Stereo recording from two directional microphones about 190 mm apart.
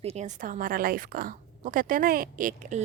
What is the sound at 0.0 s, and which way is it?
A woman's voice, 35° right (ahead or behind).